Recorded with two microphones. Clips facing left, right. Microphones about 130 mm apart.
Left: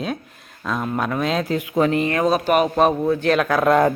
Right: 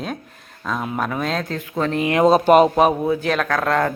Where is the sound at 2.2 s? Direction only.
25° right (ahead or behind).